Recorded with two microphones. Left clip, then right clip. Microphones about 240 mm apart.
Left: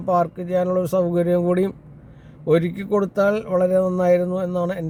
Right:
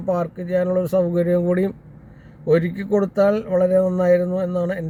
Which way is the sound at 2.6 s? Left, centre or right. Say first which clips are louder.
Right 1 dB; centre.